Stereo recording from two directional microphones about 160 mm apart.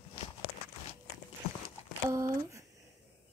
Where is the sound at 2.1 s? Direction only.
20° right (ahead or behind).